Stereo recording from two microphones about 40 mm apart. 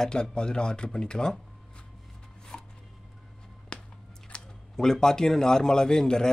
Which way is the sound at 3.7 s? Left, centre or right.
Left.